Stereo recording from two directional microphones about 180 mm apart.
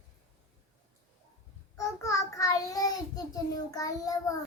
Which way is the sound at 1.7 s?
15° left (ahead or behind).